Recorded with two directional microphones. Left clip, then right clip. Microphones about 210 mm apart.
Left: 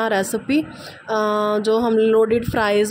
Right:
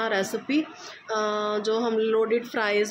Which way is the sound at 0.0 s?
30° left (ahead or behind).